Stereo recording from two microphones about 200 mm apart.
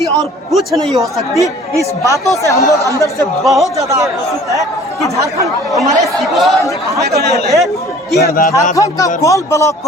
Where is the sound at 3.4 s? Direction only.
Centre (ahead or behind).